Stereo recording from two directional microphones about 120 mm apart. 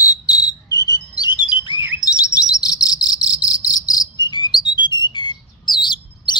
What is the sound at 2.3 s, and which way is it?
Cricket, 30° left (ahead or behind).